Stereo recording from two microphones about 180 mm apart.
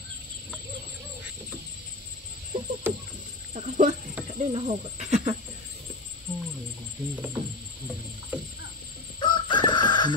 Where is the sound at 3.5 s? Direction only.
40° right (ahead or behind).